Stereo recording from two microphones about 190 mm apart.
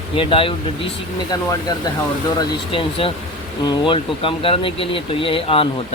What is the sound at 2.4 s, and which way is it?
Speech, 25° left (ahead or behind).